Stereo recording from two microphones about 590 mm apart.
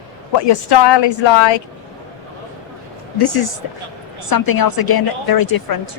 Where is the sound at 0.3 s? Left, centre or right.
Left.